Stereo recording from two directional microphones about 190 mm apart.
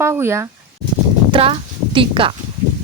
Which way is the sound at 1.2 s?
25° right (ahead or behind).